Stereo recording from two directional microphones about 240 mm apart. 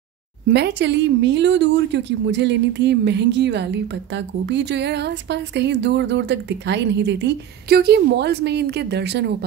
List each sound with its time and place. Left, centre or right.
0.5 s speech: right